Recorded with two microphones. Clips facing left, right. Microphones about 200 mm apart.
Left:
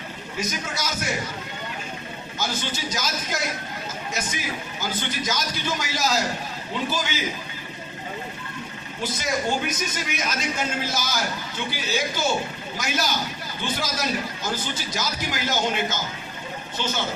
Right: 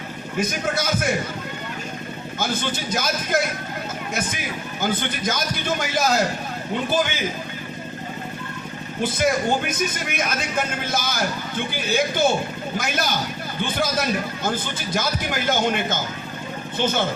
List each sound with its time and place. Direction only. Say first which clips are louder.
0.3 s a woman's voice: right 6 dB; 55° right (ahead or behind)
2.4 s a woman's voice: right 3 dB; 55° right (ahead or behind)
4.8 s a man's voice: right 6 dB; 55° right (ahead or behind)
9.0 s a woman's voice: right 6 dB; 55° right (ahead or behind)